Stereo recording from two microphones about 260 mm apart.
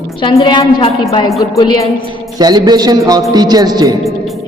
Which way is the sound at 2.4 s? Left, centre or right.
Centre.